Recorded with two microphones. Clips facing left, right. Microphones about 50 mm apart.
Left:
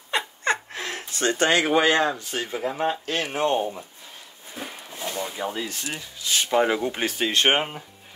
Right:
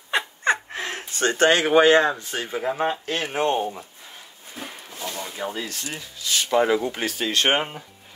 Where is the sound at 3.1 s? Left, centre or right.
Centre.